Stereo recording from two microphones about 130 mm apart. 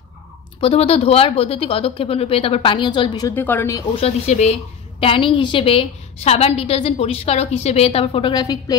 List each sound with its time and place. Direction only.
0.6 s a woman's voice: 50° left (ahead or behind); by 3.3 s 35° left (ahead or behind)
3.3 s speech: 15° left (ahead or behind)
3.9 s a woman's voice: 55° left (ahead or behind)
5.0 s a woman's voice: 40° left (ahead or behind)